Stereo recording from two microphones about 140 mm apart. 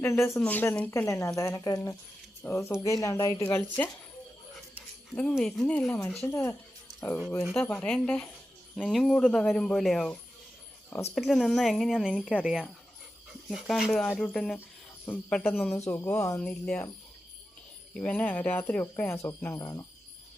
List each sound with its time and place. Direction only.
0.0 s speech: 20° left (ahead or behind)
5.4 s speech: 5° left (ahead or behind)
15.7 s speech: 20° left (ahead or behind)
16.4 s speech: 10° left (ahead or behind)
17.9 s speech: 10° left (ahead or behind); by 19.8 s 25° left (ahead or behind)